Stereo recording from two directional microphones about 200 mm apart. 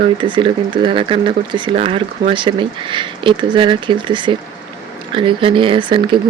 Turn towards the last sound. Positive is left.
turn(degrees=-25)  # may be behind; listen again after turning